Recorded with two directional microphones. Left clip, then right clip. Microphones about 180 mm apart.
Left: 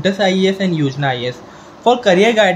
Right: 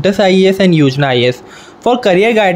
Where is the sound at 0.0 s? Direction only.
45° right (ahead or behind).